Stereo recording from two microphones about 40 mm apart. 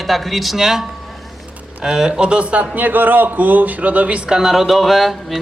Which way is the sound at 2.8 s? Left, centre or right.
Right.